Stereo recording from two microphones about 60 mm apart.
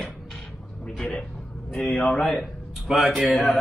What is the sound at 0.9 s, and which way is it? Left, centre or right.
Speech, centre.